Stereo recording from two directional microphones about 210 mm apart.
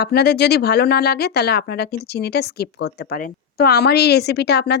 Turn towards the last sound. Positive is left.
turn(degrees=50)  # may be behind; listen again after turning